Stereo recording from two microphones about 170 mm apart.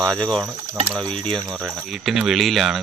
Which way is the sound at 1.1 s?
30° right (ahead or behind).